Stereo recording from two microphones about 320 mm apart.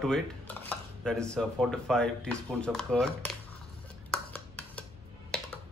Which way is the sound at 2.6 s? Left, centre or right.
Centre.